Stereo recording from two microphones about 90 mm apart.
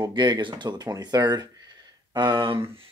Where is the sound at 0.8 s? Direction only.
45° right (ahead or behind); by 2.6 s 60° right (ahead or behind).